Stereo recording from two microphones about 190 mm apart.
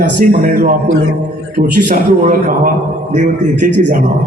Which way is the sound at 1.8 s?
45° right (ahead or behind).